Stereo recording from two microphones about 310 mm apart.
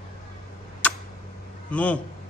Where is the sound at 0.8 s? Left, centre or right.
Centre.